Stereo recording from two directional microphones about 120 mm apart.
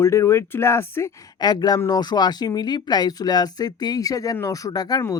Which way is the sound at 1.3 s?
35° left (ahead or behind).